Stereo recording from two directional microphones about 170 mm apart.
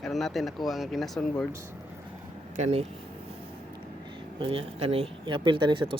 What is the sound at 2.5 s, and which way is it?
Speech, 40° right (ahead or behind).